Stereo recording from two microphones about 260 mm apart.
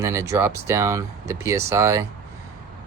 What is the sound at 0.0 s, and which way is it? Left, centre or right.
Speech, centre.